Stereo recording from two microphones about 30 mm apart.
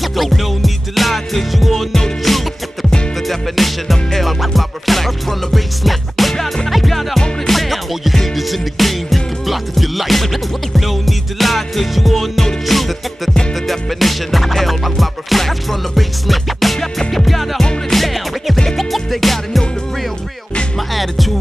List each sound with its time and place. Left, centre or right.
0.0 s music: centre
20.9 s music: centre